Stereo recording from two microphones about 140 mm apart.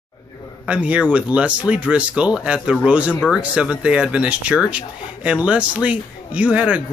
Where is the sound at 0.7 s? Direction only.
10° right (ahead or behind).